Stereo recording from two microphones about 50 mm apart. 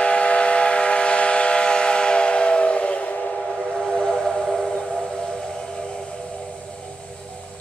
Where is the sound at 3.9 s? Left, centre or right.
Centre.